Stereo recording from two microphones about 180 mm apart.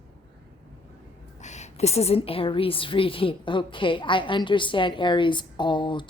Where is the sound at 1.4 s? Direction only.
40° left (ahead or behind).